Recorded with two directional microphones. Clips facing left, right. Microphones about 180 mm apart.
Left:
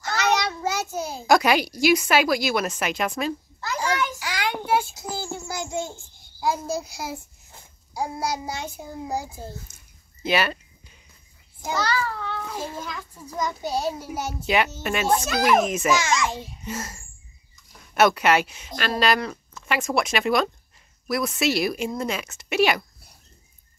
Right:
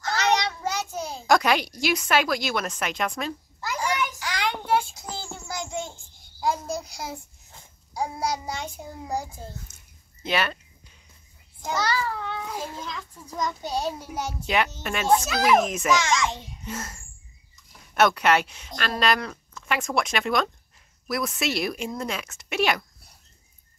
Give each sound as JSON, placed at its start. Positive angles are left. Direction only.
{"t": 0.0, "sound": "a child's voice", "side_deg": 5}
{"t": 3.6, "sound": "a sound", "side_deg": -15}
{"t": 4.2, "sound": "child singing", "side_deg": 5}
{"t": 6.4, "sound": "a child's voice", "side_deg": 5}
{"t": 11.8, "sound": "a child's voice", "side_deg": -15}
{"t": 12.7, "sound": "a child's voice", "side_deg": 5}